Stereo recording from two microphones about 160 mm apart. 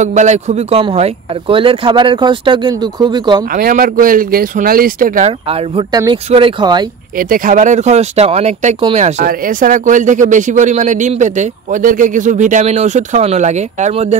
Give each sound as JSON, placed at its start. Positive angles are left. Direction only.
{"t": 0.0, "sound": "a man's voice", "side_deg": -45}
{"t": 3.5, "sound": "speech", "side_deg": -65}
{"t": 5.5, "sound": "a man's voice", "side_deg": -35}
{"t": 7.2, "sound": "speech", "side_deg": -60}
{"t": 8.9, "sound": "speech", "side_deg": -55}